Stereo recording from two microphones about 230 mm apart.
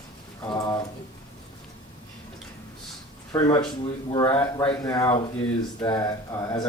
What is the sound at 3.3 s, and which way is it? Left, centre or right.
Speech, centre.